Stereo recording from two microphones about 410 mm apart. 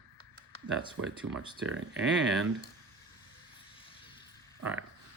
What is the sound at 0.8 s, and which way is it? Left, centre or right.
Speech, centre.